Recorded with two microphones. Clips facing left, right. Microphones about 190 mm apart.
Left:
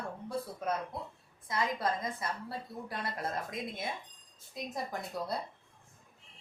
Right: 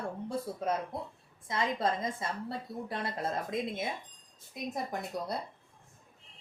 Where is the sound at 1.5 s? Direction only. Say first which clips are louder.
Right 2 dB; 25° right (ahead or behind).